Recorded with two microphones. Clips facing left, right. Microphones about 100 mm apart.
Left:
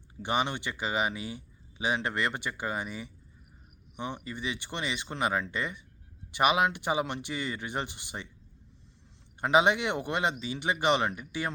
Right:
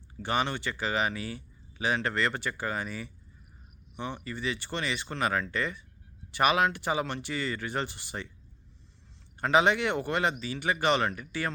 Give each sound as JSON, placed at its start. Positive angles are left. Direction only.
{"t": 0.2, "sound": "speech", "side_deg": 15}
{"t": 9.4, "sound": "speech", "side_deg": 20}